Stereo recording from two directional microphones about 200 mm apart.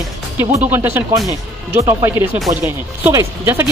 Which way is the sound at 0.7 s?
10° right (ahead or behind).